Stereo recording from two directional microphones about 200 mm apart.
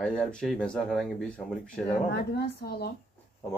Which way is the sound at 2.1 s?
50° left (ahead or behind).